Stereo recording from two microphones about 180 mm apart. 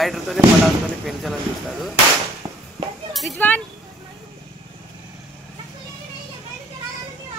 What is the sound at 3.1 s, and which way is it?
Speech, 5° left (ahead or behind).